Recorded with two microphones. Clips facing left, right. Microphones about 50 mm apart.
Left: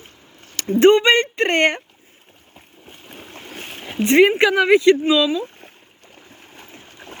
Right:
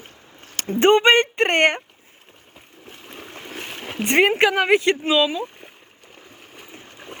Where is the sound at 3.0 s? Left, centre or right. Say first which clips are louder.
Right 1 dB; right.